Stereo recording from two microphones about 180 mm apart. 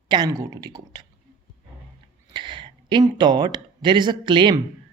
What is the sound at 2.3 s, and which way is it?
Speech, 25° right (ahead or behind).